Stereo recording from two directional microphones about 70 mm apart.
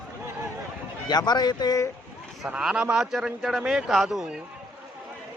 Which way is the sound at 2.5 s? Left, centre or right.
Centre.